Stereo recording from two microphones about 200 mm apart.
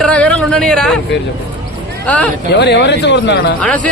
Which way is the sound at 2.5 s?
55° left (ahead or behind).